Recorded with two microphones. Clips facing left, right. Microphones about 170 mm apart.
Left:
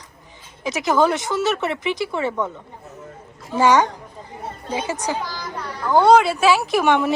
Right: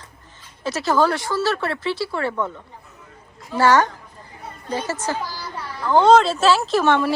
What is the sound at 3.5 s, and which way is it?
Speech, 20° left (ahead or behind).